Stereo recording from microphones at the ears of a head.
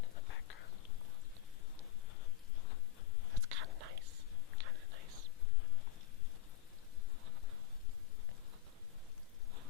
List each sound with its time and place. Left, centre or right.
0.0 s whispering: left
3.3 s whispering: right